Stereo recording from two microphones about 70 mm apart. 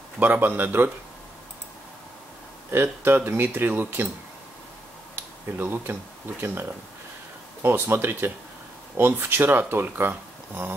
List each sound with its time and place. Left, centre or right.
0.2 s speech: right
2.7 s speech: right
5.6 s speech: right
7.6 s speech: right